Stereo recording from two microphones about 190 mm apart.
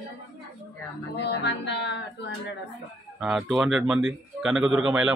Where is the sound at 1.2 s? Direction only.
65° left (ahead or behind).